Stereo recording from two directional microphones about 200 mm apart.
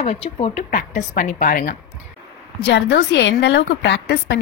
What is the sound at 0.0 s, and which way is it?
Speech, 30° left (ahead or behind).